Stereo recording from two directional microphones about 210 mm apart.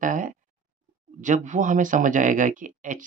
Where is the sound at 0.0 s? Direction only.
40° right (ahead or behind).